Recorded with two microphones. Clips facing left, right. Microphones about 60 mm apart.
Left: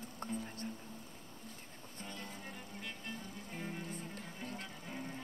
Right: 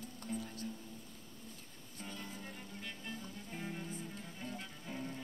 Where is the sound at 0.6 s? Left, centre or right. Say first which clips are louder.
Even; left.